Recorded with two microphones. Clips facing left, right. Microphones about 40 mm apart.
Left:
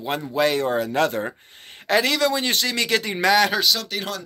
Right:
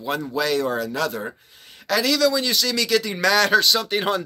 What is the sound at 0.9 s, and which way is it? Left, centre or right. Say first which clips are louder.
Speech: left 4 dB; left.